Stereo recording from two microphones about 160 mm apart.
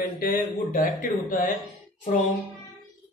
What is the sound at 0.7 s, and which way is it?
Speech, 55° left (ahead or behind).